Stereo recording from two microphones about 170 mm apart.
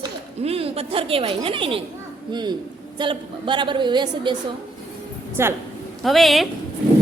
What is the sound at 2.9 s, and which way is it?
A woman's voice, 30° right (ahead or behind).